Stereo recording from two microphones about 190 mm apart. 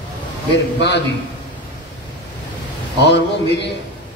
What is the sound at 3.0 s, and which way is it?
Speech, 65° left (ahead or behind).